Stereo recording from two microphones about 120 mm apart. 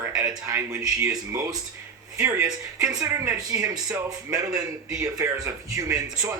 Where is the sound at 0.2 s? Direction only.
25° right (ahead or behind).